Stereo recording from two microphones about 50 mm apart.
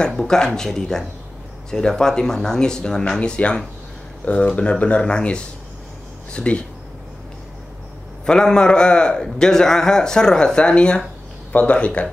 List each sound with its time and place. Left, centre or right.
0.0 s a man's voice: centre
3.2 s speech: left
8.3 s a man's voice: centre